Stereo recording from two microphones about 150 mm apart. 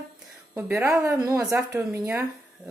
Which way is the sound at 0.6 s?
20° right (ahead or behind).